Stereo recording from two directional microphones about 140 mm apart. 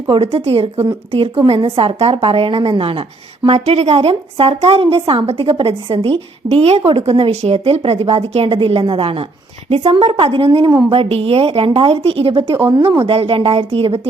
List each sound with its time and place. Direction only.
0.1 s a woman's voice: 45° right (ahead or behind)
10.7 s a woman's voice: 25° right (ahead or behind)
10.9 s a woman's voice: 40° right (ahead or behind)